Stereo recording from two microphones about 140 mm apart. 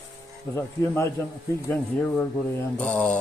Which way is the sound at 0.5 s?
20° left (ahead or behind).